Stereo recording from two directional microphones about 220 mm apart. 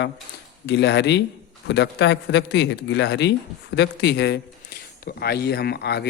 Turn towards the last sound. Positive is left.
turn(degrees=50)  # may be behind; listen again after turning